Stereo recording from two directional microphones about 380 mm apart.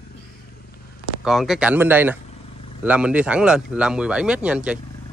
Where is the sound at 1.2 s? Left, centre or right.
Centre.